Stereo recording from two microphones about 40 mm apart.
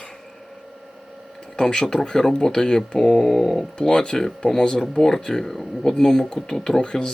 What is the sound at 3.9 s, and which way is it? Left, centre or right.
Speech, left.